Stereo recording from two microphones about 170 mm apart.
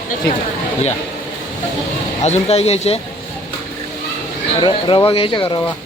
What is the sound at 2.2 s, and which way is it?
Speech, 40° left (ahead or behind).